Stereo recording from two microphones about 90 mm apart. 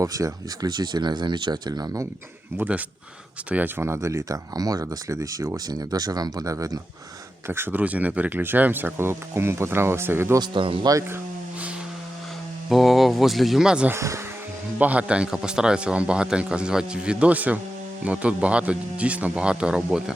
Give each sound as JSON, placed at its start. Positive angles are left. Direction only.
{"t": 0.0, "sound": "speech", "side_deg": -40}
{"t": 2.6, "sound": "speech", "side_deg": -15}
{"t": 3.8, "sound": "speech", "side_deg": -30}
{"t": 7.4, "sound": "speech", "side_deg": -25}
{"t": 10.4, "sound": "a man's voice", "side_deg": -65}
{"t": 12.6, "sound": "speech", "side_deg": 0}
{"t": 13.9, "sound": "speech", "side_deg": -35}
{"t": 14.8, "sound": "speech", "side_deg": -15}